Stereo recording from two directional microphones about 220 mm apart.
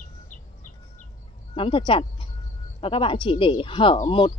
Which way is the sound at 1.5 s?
25° left (ahead or behind).